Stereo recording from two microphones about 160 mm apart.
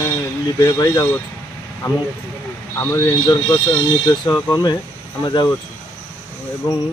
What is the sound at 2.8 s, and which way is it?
Speech, 20° left (ahead or behind).